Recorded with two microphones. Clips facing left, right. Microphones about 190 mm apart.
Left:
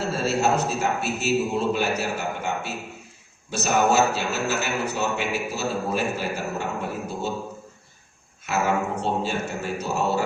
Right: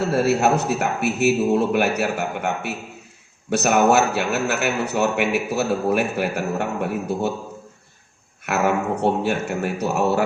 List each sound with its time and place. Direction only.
0.1 s a man's voice: 60° right (ahead or behind)
8.4 s a man's voice: 60° right (ahead or behind)